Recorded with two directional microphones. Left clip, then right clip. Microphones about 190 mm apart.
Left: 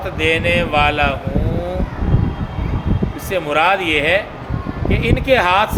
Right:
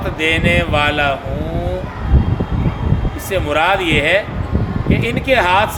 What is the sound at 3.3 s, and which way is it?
A man's voice, 20° left (ahead or behind).